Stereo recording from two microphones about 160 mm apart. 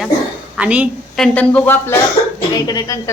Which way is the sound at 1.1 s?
5° left (ahead or behind).